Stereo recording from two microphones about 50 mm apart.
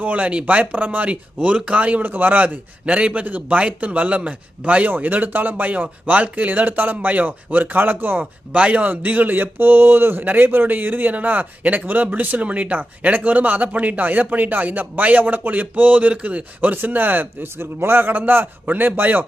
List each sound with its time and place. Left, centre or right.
0.0 s a man's voice: right
8.5 s a man's voice: right